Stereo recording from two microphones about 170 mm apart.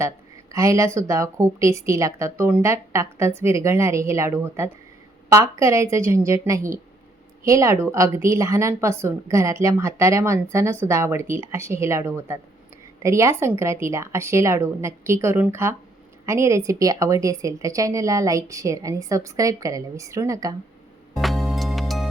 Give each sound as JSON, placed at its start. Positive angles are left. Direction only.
{"t": 0.5, "sound": "a woman's voice", "side_deg": -20}
{"t": 21.2, "sound": "music", "side_deg": 0}